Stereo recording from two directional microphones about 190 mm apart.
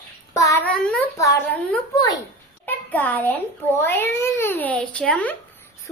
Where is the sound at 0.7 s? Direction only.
5° left (ahead or behind).